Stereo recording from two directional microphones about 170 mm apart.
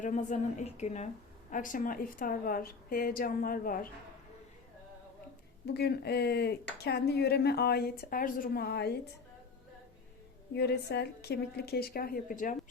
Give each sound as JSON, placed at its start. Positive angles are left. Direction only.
{"t": 0.0, "sound": "a woman's voice", "side_deg": 45}
{"t": 5.6, "sound": "a woman's voice", "side_deg": 75}
{"t": 10.5, "sound": "a woman's voice", "side_deg": 75}